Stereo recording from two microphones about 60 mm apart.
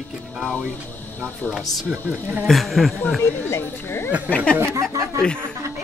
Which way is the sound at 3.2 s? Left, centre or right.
Left.